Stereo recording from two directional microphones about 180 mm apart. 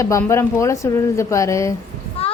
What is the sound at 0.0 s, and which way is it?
A woman's voice, 15° left (ahead or behind).